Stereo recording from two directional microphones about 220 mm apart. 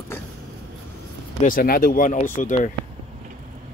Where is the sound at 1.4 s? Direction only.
40° left (ahead or behind).